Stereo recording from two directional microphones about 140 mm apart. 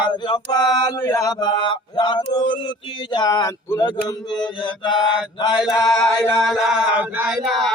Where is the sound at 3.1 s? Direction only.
30° left (ahead or behind).